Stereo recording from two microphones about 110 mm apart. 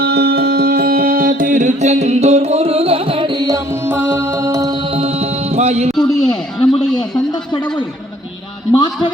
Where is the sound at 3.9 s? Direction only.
20° right (ahead or behind).